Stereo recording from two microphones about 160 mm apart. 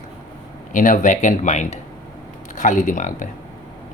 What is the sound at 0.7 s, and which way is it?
Speech, 55° left (ahead or behind).